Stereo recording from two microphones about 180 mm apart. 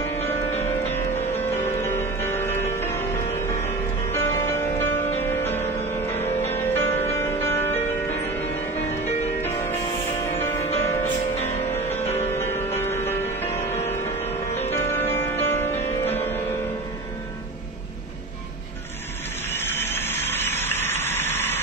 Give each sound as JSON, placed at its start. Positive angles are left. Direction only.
{"t": 0.0, "sound": "music", "side_deg": 15}
{"t": 4.1, "sound": "music", "side_deg": 15}
{"t": 10.4, "sound": "music", "side_deg": 15}
{"t": 19.5, "sound": "vehicle", "side_deg": 10}